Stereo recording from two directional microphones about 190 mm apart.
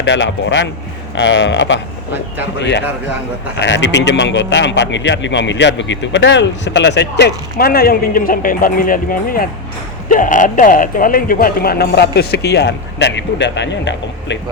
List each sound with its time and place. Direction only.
0.0 s a man's voice: 70° left (ahead or behind)